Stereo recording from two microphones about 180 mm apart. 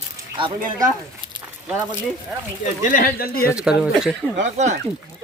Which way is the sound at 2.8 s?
50° left (ahead or behind).